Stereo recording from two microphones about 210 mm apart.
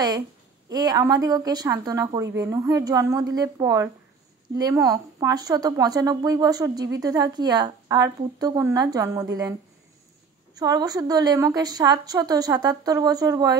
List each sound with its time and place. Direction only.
0.7 s a woman's voice: 20° right (ahead or behind)